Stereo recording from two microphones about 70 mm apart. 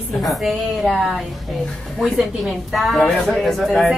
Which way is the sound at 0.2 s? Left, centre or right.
Centre.